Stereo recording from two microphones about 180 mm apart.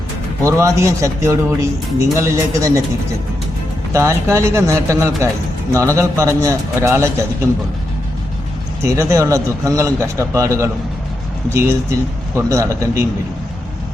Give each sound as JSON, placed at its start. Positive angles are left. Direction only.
{"t": 0.4, "sound": "speech", "side_deg": -15}
{"t": 3.9, "sound": "speech", "side_deg": -15}
{"t": 8.8, "sound": "speech", "side_deg": -15}